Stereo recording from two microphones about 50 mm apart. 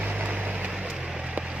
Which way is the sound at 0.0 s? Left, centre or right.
Right.